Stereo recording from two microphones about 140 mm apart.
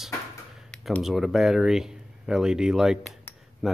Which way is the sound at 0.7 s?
Centre (ahead or behind).